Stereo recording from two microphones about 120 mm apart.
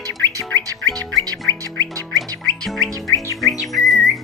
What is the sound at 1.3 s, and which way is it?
Music, 20° left (ahead or behind).